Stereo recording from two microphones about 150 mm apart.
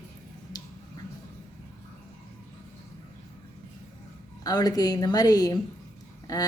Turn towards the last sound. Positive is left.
turn(degrees=25)  # may be behind; listen again after turning